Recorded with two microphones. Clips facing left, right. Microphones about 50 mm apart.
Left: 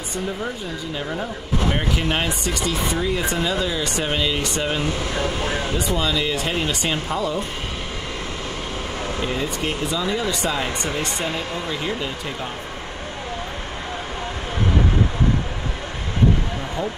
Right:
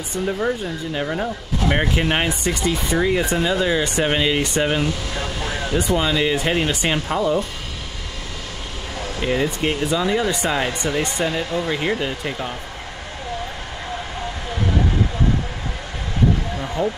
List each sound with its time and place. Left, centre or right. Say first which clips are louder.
0.9 s speech: right 4 dB; centre
1.7 s speech: right 5 dB; right
4.8 s speech: left 2 dB; left
5.8 s speech: right 6 dB; right
9.2 s speech: right 6 dB; right
10.7 s speech: right 2 dB; left
11.3 s speech: right 4 dB; right